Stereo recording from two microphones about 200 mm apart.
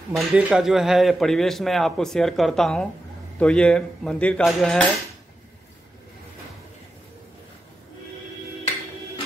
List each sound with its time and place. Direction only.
0.1 s speech: 5° right (ahead or behind)